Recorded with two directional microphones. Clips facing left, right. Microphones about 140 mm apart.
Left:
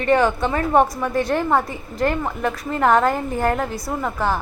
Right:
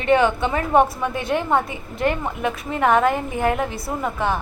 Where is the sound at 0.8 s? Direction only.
30° right (ahead or behind).